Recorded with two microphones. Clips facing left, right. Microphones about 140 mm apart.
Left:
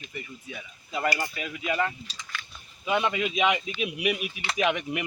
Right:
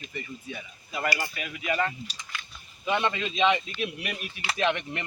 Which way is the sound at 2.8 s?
5° left (ahead or behind).